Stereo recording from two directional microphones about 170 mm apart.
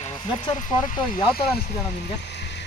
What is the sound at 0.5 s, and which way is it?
Speech, 50° left (ahead or behind).